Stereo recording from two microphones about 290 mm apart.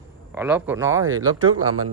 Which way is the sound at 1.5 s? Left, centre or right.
Right.